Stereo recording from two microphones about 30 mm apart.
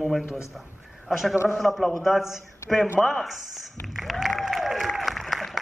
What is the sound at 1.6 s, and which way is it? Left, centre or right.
Speech, centre.